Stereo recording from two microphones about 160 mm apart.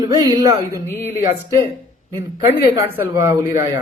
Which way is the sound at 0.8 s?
15° left (ahead or behind).